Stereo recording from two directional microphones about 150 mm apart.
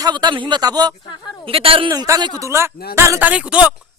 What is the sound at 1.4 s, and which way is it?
A man's voice, 40° right (ahead or behind).